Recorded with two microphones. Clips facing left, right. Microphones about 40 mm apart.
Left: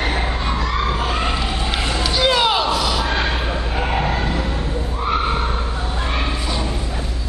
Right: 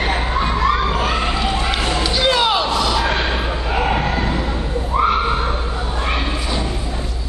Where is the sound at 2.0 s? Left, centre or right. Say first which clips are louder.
Left 1 dB; centre.